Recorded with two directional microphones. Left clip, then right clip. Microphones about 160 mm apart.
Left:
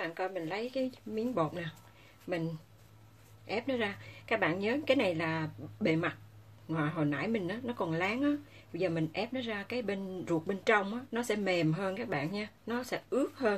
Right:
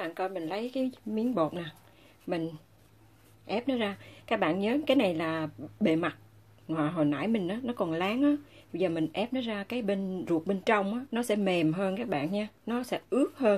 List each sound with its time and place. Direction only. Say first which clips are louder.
0.0 s speech: right 3 dB; 40° right (ahead or behind)